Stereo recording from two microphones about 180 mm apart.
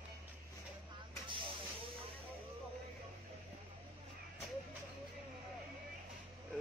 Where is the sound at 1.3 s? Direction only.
25° right (ahead or behind).